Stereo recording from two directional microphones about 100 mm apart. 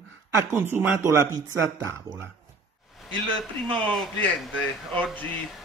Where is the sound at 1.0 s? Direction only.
25° right (ahead or behind).